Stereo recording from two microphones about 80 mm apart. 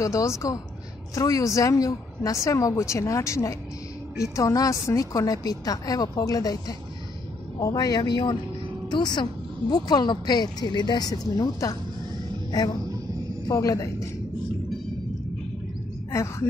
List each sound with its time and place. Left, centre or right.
0.0 s a woman's voice: left
13.5 s a woman's voice: left
16.1 s a woman's voice: left